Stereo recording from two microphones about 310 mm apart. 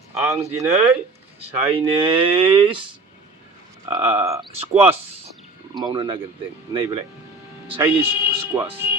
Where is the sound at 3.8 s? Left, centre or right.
Centre.